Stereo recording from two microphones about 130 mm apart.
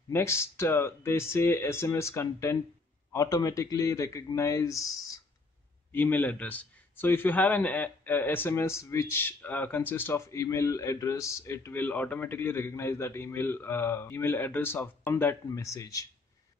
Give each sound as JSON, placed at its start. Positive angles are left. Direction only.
{"t": 0.1, "sound": "speech", "side_deg": 20}
{"t": 5.9, "sound": "a man's voice", "side_deg": 15}